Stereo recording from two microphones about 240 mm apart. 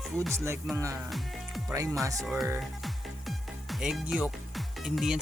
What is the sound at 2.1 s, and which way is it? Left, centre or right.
Speech, centre.